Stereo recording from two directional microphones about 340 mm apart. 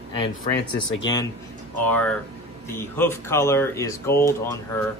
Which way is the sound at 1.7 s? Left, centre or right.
Centre.